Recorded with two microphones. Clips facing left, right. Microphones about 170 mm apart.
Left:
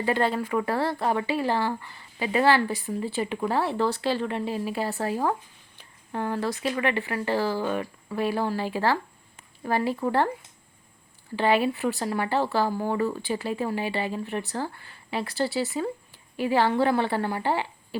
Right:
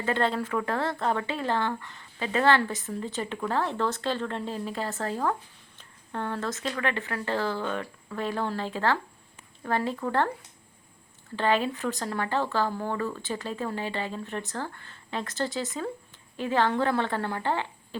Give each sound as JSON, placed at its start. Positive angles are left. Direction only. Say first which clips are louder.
{"t": 0.0, "sound": "speech", "louder": "left 2 dB", "side_deg": 5}
{"t": 11.3, "sound": "speech", "louder": "left 3 dB", "side_deg": 10}